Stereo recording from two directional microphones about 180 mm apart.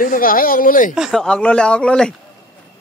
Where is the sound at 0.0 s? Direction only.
50° left (ahead or behind).